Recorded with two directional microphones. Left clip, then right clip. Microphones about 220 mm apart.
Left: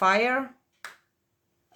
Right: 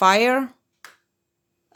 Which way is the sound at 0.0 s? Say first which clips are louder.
Right 6 dB; 45° right (ahead or behind).